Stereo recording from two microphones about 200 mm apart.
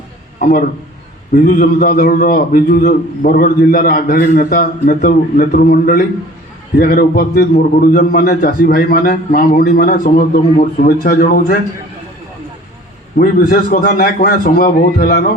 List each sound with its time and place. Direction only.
0.3 s a man's voice: 45° left (ahead or behind)
13.1 s a man's voice: 45° left (ahead or behind)